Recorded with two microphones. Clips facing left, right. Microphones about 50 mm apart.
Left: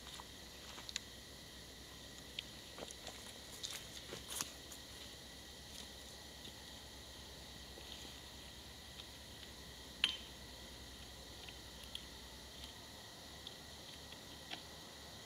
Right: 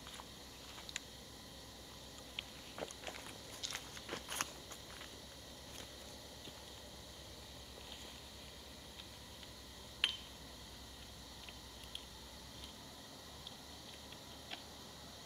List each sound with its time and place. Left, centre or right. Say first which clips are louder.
2.3 s vehicle: right 4 dB; right
3.6 s walk: right 5 dB; right
10.0 s a sound: even; centre